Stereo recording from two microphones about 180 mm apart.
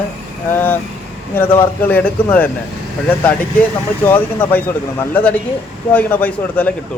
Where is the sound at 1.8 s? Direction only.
10° left (ahead or behind).